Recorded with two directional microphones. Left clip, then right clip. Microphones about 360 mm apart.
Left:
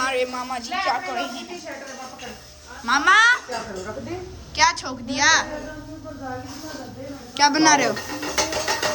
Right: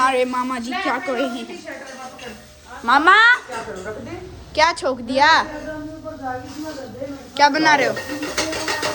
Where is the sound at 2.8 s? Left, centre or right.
Centre.